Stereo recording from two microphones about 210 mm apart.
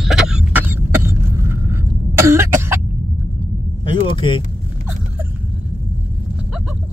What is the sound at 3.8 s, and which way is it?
Vehicle, 25° left (ahead or behind).